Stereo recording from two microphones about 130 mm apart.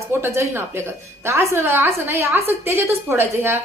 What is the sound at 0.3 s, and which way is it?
A woman's voice, 20° right (ahead or behind).